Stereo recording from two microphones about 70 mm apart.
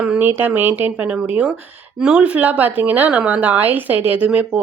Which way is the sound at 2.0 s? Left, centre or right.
Centre.